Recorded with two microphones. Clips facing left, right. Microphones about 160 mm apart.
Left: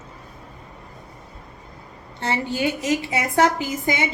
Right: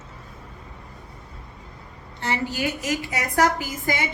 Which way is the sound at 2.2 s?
25° left (ahead or behind).